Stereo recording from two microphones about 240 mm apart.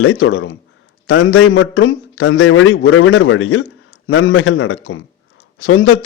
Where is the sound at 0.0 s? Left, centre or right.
Left.